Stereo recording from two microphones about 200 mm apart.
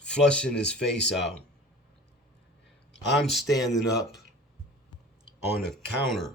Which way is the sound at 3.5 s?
20° left (ahead or behind).